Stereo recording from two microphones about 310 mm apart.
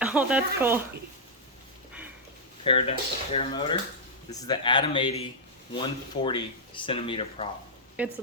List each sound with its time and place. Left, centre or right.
0.0 s speech: centre
2.6 s speech: centre
8.0 s speech: centre